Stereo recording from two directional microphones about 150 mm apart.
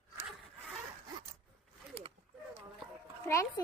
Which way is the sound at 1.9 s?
40° right (ahead or behind).